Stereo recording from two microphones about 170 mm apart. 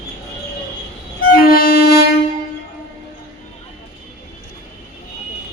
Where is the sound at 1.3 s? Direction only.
60° left (ahead or behind).